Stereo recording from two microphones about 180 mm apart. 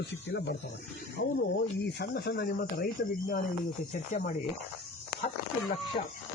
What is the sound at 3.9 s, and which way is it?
Speech, 50° left (ahead or behind).